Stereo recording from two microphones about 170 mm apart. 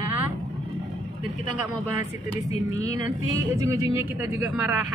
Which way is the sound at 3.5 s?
15° right (ahead or behind).